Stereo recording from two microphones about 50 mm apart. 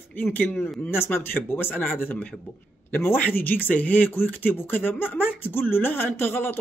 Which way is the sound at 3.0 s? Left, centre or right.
Left.